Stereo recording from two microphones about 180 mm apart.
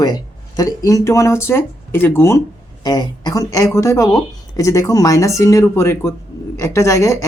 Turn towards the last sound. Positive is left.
turn(degrees=15)  # may be behind; listen again after turning